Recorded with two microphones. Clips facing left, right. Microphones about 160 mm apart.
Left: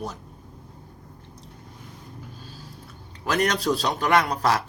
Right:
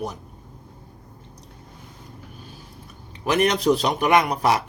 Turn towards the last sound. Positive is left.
turn(degrees=-15)  # may be behind; listen again after turning